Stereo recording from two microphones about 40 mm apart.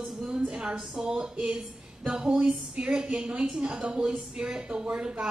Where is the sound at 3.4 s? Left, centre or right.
Centre.